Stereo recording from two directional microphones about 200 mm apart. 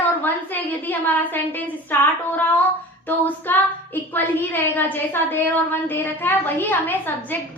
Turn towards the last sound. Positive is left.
turn(degrees=10)  # may be behind; listen again after turning